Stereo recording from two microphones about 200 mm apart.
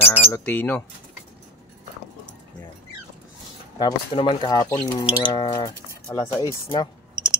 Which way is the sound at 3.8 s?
20° left (ahead or behind).